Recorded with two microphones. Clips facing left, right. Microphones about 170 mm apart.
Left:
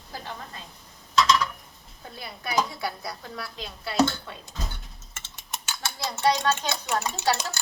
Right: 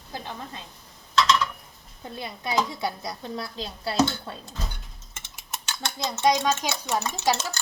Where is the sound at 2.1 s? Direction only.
20° right (ahead or behind).